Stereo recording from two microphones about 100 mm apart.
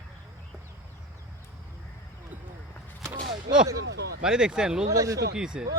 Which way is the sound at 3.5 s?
35° right (ahead or behind).